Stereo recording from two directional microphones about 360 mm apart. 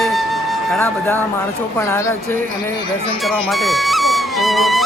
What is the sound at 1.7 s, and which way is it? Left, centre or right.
Speech, centre.